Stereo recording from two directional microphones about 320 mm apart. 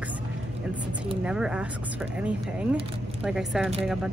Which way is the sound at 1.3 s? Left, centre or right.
Centre.